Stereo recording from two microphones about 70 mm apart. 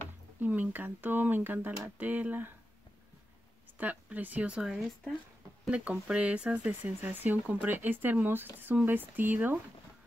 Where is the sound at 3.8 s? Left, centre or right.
Right.